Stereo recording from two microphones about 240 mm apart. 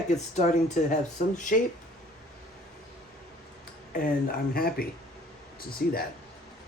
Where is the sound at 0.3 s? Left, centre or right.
Left.